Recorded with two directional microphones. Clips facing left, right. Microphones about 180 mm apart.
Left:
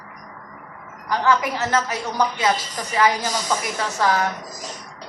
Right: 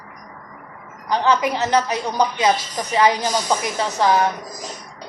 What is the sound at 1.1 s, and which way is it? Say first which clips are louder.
A woman's voice: right 2 dB; 20° right (ahead or behind).